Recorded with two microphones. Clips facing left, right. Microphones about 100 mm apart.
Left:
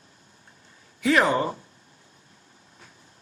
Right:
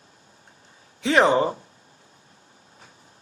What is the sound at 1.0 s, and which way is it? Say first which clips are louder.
Speech: right 3 dB; 25° right (ahead or behind).